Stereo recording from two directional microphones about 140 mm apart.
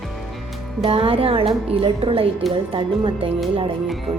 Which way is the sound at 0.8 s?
40° right (ahead or behind).